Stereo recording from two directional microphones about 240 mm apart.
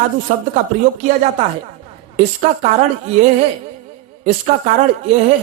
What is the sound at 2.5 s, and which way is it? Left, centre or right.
Speech, right.